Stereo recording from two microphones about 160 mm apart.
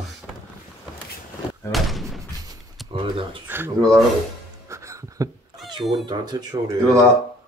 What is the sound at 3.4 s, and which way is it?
Speech, 15° right (ahead or behind).